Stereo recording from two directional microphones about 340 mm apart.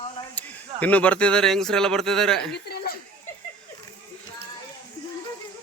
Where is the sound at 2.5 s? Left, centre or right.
Left.